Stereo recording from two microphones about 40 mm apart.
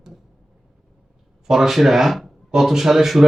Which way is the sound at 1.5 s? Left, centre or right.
Centre.